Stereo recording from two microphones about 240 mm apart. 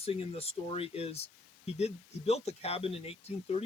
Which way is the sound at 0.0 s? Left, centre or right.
Left.